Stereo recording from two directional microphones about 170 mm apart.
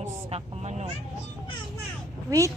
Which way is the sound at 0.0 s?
40° right (ahead or behind).